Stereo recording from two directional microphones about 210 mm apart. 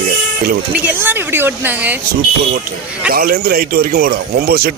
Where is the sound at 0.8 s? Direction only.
10° right (ahead or behind).